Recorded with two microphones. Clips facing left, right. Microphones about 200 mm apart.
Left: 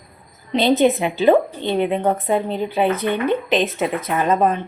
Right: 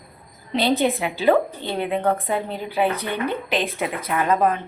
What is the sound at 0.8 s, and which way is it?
A woman's voice, 20° left (ahead or behind).